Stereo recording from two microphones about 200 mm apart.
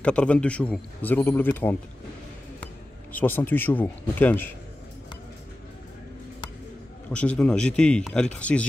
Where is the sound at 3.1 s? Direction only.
10° left (ahead or behind).